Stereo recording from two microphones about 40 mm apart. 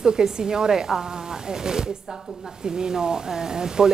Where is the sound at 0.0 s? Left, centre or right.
Centre.